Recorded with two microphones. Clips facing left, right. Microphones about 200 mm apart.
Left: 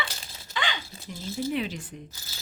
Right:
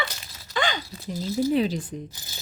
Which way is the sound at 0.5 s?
45° right (ahead or behind).